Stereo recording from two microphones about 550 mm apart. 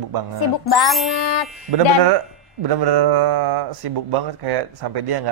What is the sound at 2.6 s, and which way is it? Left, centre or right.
Speech, right.